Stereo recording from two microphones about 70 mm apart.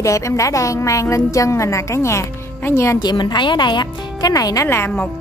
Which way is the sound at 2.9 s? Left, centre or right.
Left.